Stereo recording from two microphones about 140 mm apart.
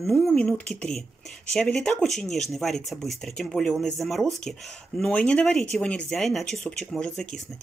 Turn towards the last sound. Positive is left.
turn(degrees=5)  # may be behind; listen again after turning